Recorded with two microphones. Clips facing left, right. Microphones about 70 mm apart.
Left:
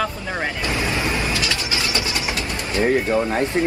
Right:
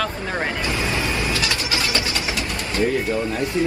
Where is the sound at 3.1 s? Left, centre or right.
Left.